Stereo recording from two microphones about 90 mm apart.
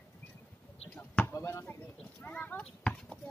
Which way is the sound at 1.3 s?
30° left (ahead or behind).